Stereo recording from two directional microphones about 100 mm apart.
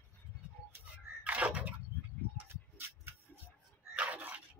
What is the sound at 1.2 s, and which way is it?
Bathtub, 15° right (ahead or behind).